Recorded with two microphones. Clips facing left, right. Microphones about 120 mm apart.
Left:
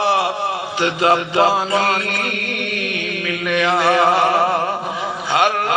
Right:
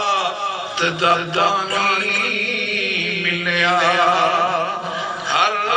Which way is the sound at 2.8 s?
45° left (ahead or behind).